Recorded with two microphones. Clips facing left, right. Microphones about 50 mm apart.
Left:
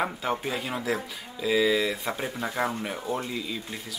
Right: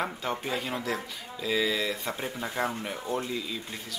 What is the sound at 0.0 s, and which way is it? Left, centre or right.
Speech, centre.